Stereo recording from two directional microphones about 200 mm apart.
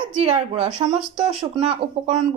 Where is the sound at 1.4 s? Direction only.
25° right (ahead or behind).